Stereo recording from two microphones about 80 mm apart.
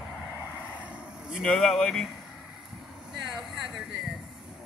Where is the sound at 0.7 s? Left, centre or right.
Centre.